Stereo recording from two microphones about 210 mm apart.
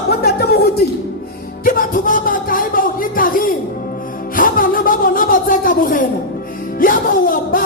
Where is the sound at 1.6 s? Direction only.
40° left (ahead or behind).